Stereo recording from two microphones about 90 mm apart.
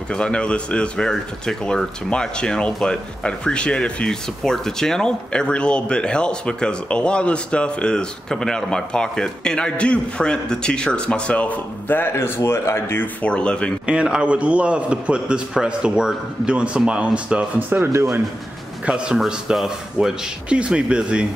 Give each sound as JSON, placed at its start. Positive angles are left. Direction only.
{"t": 0.1, "sound": "speech", "side_deg": 10}
{"t": 13.2, "sound": "speech", "side_deg": 10}
{"t": 13.8, "sound": "a man's voice", "side_deg": -10}
{"t": 17.9, "sound": "speech", "side_deg": -30}
{"t": 18.9, "sound": "a man's voice", "side_deg": -10}